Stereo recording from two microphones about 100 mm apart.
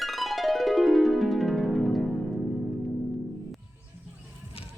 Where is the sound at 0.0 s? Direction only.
Centre (ahead or behind).